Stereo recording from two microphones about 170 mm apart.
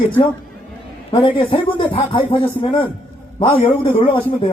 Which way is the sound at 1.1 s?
30° left (ahead or behind).